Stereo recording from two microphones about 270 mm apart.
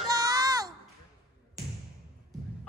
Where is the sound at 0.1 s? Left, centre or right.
Centre.